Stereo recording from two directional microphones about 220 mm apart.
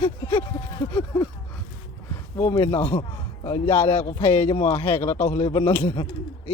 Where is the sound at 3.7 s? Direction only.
10° left (ahead or behind).